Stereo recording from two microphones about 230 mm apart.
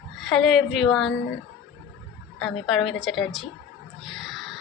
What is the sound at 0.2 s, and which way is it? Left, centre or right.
Speech, centre.